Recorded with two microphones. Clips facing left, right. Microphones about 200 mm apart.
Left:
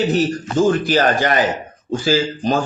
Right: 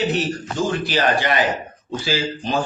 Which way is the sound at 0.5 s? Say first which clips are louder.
Left 7 dB; 55° left (ahead or behind).